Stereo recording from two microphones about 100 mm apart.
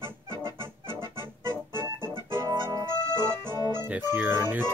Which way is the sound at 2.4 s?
40° right (ahead or behind).